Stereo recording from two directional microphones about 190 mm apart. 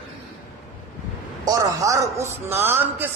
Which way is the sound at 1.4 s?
20° right (ahead or behind).